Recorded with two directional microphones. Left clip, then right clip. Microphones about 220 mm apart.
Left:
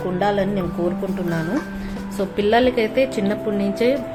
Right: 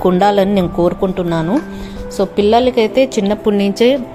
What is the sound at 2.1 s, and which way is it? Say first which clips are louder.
A woman's voice: right 6 dB; 30° right (ahead or behind).